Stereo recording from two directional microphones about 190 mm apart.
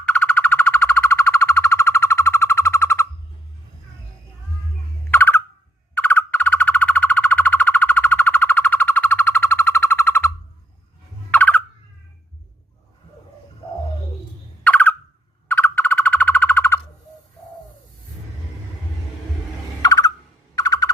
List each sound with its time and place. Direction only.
0.0 s bird: 5° left (ahead or behind)
5.1 s a sound: 10° left (ahead or behind)
5.9 s bird: 10° left (ahead or behind)
11.3 s turkey: 10° left (ahead or behind)
14.6 s bird: 10° left (ahead or behind)
19.8 s a sound: 20° left (ahead or behind)